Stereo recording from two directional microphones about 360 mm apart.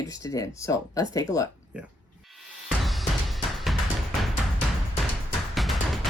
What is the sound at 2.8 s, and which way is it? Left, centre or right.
Music, centre.